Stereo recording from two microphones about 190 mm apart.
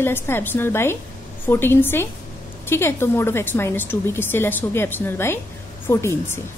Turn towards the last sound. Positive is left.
turn(degrees=15)  # may be behind; listen again after turning